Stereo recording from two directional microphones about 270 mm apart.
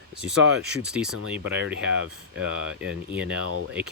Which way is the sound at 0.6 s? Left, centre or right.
Centre.